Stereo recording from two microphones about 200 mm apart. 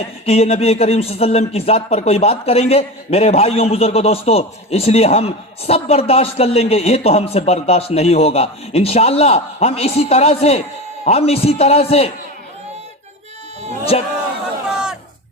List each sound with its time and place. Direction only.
0.3 s speech: 30° left (ahead or behind)
13.9 s speech: 30° left (ahead or behind)
14.7 s a sound: 5° right (ahead or behind)